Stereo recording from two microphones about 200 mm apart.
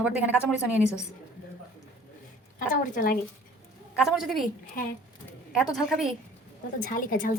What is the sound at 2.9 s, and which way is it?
Speech, 45° left (ahead or behind).